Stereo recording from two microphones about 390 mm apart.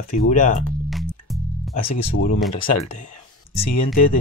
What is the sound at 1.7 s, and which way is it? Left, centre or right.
Speech, left.